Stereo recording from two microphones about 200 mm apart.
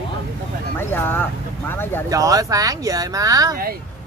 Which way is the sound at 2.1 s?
15° right (ahead or behind).